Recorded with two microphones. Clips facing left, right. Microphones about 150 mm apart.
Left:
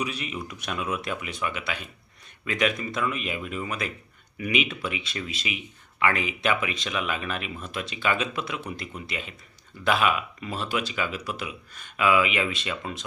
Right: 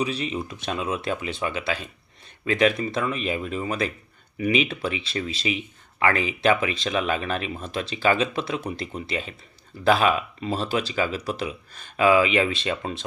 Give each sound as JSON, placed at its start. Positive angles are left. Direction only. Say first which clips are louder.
{"t": 0.0, "sound": "speech", "louder": "right 5 dB", "side_deg": -30}